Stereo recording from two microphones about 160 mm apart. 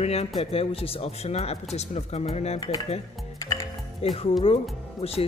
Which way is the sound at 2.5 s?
25° left (ahead or behind).